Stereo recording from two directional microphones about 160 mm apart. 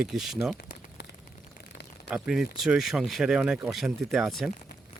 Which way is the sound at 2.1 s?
Centre (ahead or behind).